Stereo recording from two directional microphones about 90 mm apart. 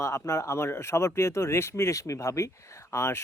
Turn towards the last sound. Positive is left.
turn(degrees=30)  # may be behind; listen again after turning